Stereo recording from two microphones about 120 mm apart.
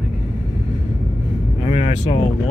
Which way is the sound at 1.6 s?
75° left (ahead or behind).